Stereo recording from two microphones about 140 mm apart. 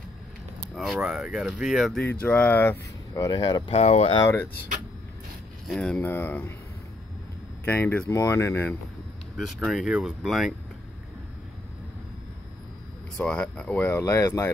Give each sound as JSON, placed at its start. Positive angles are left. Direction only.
{"t": 0.7, "sound": "speech", "side_deg": -5}
{"t": 2.2, "sound": "speech", "side_deg": 10}
{"t": 3.2, "sound": "speech", "side_deg": 30}
{"t": 3.7, "sound": "speech", "side_deg": 50}
{"t": 5.7, "sound": "speech", "side_deg": 5}
{"t": 7.6, "sound": "speech", "side_deg": 10}
{"t": 9.4, "sound": "speech", "side_deg": 0}
{"t": 13.2, "sound": "speech", "side_deg": 10}